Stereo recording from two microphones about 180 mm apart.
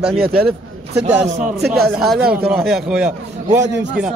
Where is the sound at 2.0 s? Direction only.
Centre (ahead or behind).